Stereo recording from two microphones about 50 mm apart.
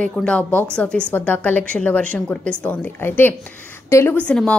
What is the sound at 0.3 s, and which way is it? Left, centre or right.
Speech, left.